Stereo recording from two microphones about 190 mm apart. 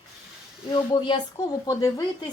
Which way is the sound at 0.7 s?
25° left (ahead or behind).